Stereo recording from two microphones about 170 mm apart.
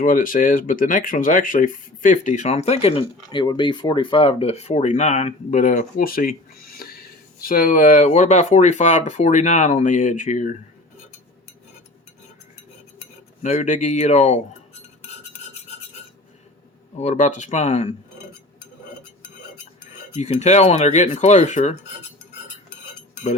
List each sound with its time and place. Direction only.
0.0 s speech: 50° left (ahead or behind)
13.4 s speech: 45° left (ahead or behind)
17.0 s speech: 45° left (ahead or behind)
20.1 s speech: 40° left (ahead or behind)